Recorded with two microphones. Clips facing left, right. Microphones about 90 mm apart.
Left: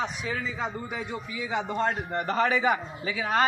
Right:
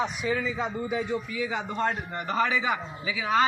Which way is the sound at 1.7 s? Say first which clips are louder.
Left 1 dB; 30° left (ahead or behind).